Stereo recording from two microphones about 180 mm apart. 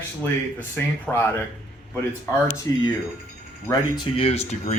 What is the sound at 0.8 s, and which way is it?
Speech, 10° left (ahead or behind).